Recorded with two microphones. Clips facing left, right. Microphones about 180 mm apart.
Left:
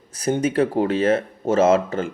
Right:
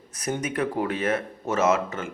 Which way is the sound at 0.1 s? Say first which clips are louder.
Left 8 dB; 30° left (ahead or behind).